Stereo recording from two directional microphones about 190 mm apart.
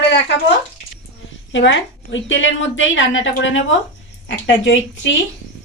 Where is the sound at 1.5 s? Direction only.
75° left (ahead or behind).